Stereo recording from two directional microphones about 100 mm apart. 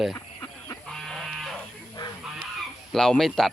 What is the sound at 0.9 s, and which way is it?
Sheep, 5° left (ahead or behind).